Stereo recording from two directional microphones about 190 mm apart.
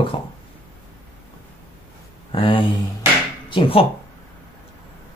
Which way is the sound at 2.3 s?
25° left (ahead or behind).